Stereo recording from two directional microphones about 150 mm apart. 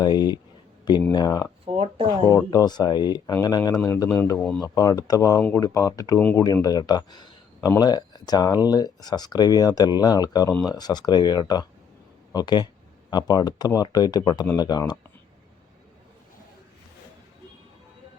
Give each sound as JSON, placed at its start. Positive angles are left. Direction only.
{"t": 0.0, "sound": "speech", "side_deg": 25}
{"t": 1.6, "sound": "speech", "side_deg": -35}
{"t": 2.5, "sound": "speech", "side_deg": 25}
{"t": 4.6, "sound": "speech", "side_deg": 25}